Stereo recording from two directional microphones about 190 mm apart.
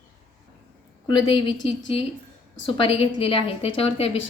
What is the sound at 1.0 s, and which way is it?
A woman's voice, 25° left (ahead or behind).